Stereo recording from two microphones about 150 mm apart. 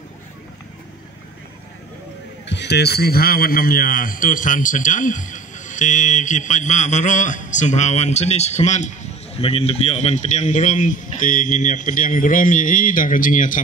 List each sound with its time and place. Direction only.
2.7 s a man's voice: 90° left; by 8.9 s 50° left (ahead or behind)
9.4 s a man's voice: 40° left (ahead or behind); by 13.6 s 65° left (ahead or behind)